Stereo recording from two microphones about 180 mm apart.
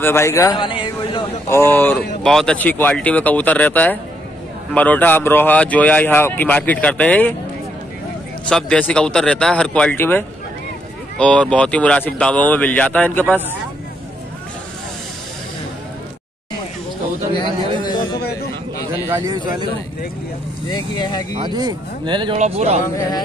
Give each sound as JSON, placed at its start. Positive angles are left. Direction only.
{"t": 0.0, "sound": "a man's voice", "side_deg": 15}
{"t": 1.5, "sound": "speech", "side_deg": 10}
{"t": 8.5, "sound": "speech", "side_deg": 5}
{"t": 17.3, "sound": "a sound", "side_deg": 25}
{"t": 19.0, "sound": "speech", "side_deg": -15}
{"t": 20.7, "sound": "speech", "side_deg": 25}
{"t": 21.4, "sound": "speech", "side_deg": -25}
{"t": 22.4, "sound": "speech", "side_deg": -35}